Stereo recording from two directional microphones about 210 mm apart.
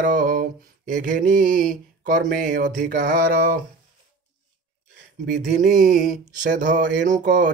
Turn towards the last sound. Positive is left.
turn(degrees=-40)  # may be behind; listen again after turning